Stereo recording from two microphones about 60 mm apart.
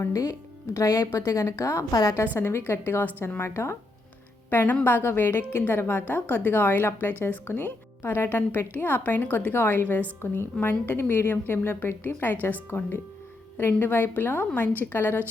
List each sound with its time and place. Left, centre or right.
0.7 s a woman's voice: left
1.9 s a woman's voice: left
2.4 s a woman's voice: left
3.5 s speech: left
4.4 s a woman's voice: left
13.6 s a woman's voice: left